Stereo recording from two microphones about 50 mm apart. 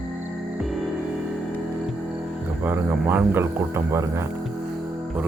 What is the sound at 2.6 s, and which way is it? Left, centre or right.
Speech, right.